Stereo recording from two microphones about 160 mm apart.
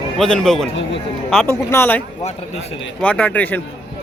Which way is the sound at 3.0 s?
10° left (ahead or behind).